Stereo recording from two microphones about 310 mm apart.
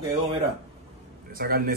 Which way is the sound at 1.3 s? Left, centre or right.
Right.